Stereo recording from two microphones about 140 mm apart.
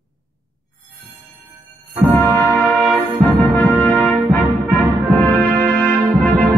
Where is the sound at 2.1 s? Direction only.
15° left (ahead or behind).